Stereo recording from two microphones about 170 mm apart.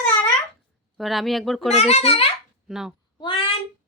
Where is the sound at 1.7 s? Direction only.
40° left (ahead or behind).